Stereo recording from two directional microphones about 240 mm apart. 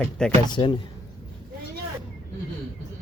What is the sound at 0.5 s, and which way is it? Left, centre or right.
Speech, centre.